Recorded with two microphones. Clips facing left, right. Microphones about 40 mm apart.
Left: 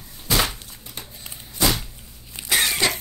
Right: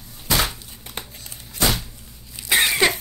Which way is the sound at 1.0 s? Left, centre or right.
Right.